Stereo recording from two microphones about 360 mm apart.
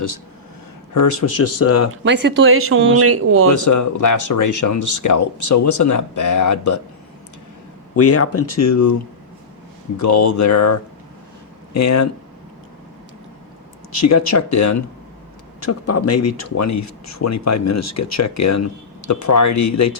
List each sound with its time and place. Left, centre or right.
0.9 s speech: left
2.0 s speech: right
3.5 s speech: left
7.9 s speech: left
10.0 s speech: left
14.0 s speech: left